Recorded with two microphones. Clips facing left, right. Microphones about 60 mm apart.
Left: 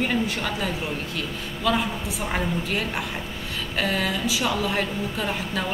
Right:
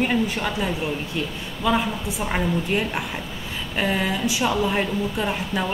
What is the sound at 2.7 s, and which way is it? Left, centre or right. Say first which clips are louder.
A woman's voice: right 3 dB; centre.